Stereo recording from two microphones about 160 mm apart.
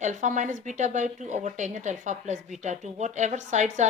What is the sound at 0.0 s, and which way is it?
Speech, 50° right (ahead or behind).